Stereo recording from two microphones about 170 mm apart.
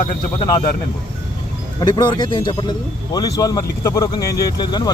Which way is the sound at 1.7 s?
25° left (ahead or behind).